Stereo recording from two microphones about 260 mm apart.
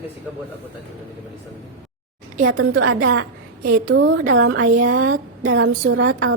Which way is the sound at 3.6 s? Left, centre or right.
Right.